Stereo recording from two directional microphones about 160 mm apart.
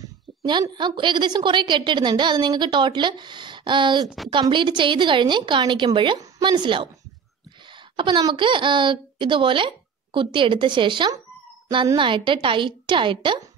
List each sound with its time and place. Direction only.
0.4 s a woman's voice: 30° right (ahead or behind)
7.9 s speech: 30° right (ahead or behind)